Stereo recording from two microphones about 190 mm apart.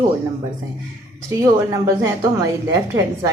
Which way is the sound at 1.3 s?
15° right (ahead or behind).